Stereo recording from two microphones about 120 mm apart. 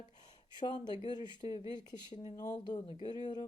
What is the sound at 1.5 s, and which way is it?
Speech, 50° left (ahead or behind).